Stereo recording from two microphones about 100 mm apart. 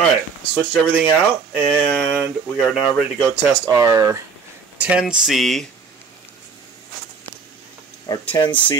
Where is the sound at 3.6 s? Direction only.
35° right (ahead or behind).